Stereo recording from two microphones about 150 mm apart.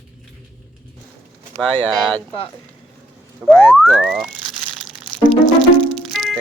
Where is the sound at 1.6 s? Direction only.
5° left (ahead or behind).